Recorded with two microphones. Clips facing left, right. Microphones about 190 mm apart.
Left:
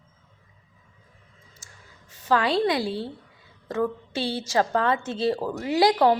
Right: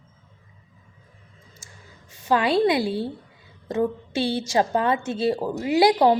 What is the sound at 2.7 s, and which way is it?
Speech, 15° right (ahead or behind).